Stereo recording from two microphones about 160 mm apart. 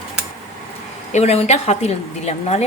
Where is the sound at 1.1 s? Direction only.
40° left (ahead or behind).